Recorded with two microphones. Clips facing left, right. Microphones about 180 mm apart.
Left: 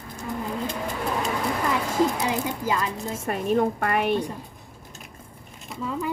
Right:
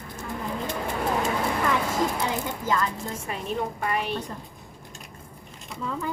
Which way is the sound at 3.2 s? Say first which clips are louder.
Left 9 dB; 50° left (ahead or behind).